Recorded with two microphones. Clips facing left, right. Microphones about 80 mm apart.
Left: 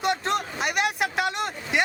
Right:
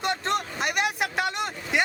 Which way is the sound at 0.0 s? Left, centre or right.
Centre.